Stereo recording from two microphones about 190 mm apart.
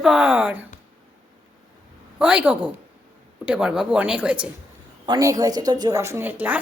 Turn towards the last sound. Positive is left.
turn(degrees=-10)  # may be behind; listen again after turning